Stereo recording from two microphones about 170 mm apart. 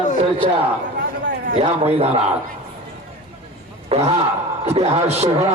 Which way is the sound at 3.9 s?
35° right (ahead or behind).